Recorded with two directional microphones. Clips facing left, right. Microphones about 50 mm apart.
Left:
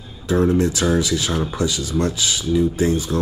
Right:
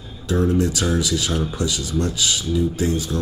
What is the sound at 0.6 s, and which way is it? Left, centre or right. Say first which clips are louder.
Speech: left 2 dB; left.